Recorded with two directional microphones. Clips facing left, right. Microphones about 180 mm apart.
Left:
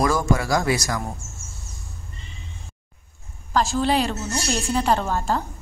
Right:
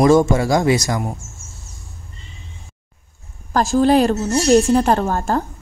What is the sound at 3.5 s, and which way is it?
A woman's voice, 45° right (ahead or behind).